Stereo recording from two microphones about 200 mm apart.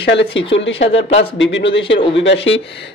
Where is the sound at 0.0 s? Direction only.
60° left (ahead or behind).